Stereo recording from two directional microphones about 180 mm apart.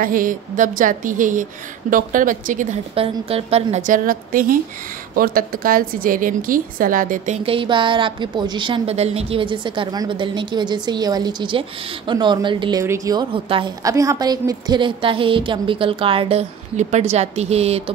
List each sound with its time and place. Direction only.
0.0 s a woman's voice: 50° right (ahead or behind)
2.9 s a woman's voice: 30° right (ahead or behind)
13.8 s a woman's voice: 20° right (ahead or behind); by 17.9 s 35° right (ahead or behind)